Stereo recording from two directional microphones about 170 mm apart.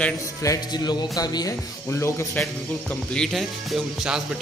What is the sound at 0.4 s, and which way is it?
A man's voice, 20° left (ahead or behind).